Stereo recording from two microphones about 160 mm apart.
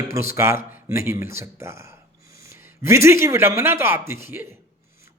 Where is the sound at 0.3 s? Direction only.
15° right (ahead or behind).